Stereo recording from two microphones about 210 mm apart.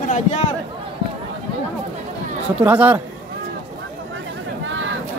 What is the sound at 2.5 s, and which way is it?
Speech, 5° right (ahead or behind).